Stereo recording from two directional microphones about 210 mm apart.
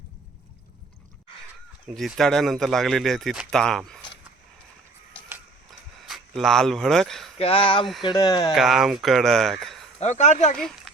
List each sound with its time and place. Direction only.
1.9 s speech: centre (ahead or behind)
6.1 s speech: centre (ahead or behind)
7.3 s speech: 25° left (ahead or behind)
8.5 s speech: centre (ahead or behind)
10.0 s speech: 35° left (ahead or behind)
10.6 s a sound: centre (ahead or behind)